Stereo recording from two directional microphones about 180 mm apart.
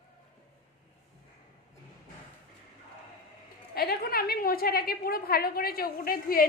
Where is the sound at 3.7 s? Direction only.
60° left (ahead or behind).